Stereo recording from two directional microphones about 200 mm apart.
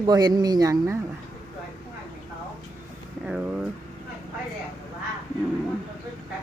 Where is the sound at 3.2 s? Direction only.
5° right (ahead or behind).